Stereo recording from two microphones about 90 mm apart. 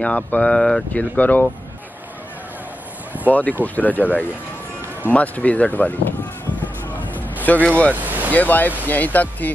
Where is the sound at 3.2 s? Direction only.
20° left (ahead or behind).